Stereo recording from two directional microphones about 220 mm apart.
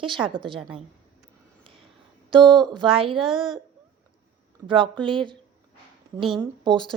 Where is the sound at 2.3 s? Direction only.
20° right (ahead or behind).